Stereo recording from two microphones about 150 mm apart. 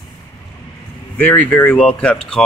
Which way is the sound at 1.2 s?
10° left (ahead or behind).